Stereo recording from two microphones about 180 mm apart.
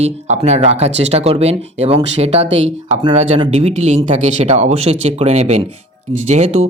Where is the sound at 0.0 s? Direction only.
40° right (ahead or behind).